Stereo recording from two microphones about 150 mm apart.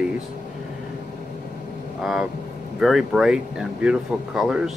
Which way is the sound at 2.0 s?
Centre (ahead or behind).